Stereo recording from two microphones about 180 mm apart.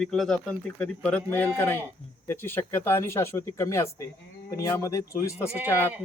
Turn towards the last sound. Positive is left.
turn(degrees=-10)  # may be behind; listen again after turning